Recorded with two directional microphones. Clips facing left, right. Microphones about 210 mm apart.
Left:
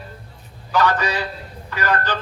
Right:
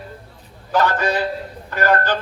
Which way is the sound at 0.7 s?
45° right (ahead or behind).